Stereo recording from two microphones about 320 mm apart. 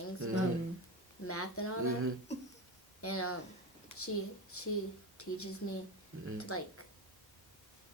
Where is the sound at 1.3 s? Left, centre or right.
Left.